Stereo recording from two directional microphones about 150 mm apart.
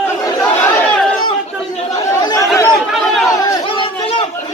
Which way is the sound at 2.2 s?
25° left (ahead or behind).